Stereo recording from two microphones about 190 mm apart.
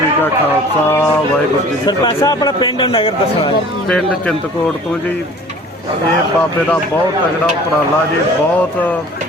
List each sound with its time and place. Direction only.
1.9 s speech: 20° left (ahead or behind)
3.8 s speech: 5° left (ahead or behind)